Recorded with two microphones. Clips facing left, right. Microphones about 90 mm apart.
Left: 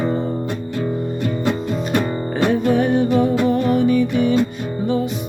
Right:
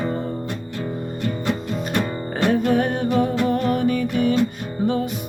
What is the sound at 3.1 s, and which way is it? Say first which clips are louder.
Music: left 3 dB; 20° left (ahead or behind).